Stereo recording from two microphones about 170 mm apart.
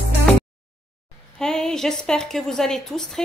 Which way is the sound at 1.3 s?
5° left (ahead or behind).